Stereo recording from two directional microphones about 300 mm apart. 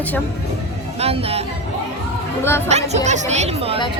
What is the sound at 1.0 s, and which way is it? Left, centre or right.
Speech, centre.